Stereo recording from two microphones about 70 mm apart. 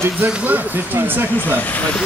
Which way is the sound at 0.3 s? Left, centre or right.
Right.